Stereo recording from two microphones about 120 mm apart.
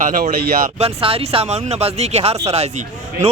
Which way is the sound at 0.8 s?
55° right (ahead or behind).